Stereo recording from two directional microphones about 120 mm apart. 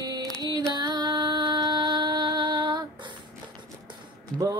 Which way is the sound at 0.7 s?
35° right (ahead or behind).